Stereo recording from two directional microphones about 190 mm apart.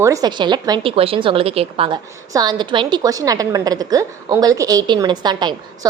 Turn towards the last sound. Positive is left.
turn(degrees=-20)  # may be behind; listen again after turning